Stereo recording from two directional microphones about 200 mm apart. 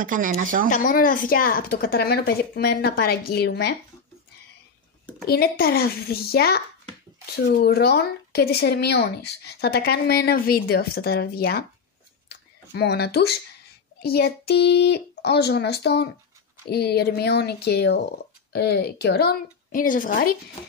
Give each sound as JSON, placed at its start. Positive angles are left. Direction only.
{"t": 0.0, "sound": "speech", "side_deg": -40}
{"t": 0.7, "sound": "a woman's voice", "side_deg": 40}
{"t": 5.2, "sound": "a woman's voice", "side_deg": 50}
{"t": 12.3, "sound": "a sound", "side_deg": 55}
{"t": 14.0, "sound": "a child's voice", "side_deg": 55}